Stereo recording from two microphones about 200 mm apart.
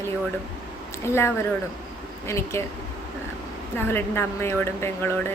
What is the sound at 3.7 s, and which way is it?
A woman's voice, 10° left (ahead or behind).